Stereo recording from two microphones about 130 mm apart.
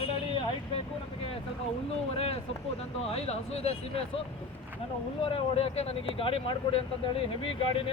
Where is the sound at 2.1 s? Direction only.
50° left (ahead or behind).